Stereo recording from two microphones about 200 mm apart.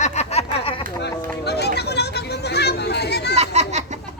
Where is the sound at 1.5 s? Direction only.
55° left (ahead or behind).